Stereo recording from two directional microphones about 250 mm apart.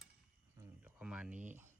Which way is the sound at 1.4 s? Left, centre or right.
Right.